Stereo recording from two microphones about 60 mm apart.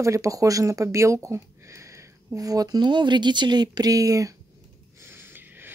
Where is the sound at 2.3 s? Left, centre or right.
Right.